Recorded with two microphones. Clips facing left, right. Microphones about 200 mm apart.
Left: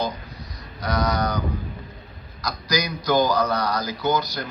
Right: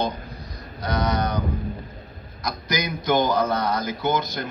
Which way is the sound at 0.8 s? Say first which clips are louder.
Even; 30° right (ahead or behind).